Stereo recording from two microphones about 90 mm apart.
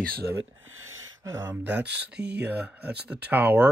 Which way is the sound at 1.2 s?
35° right (ahead or behind).